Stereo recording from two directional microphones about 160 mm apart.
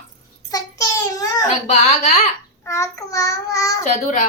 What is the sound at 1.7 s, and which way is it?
Speech, 45° left (ahead or behind).